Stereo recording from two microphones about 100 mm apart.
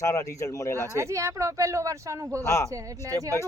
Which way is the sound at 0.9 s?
30° right (ahead or behind).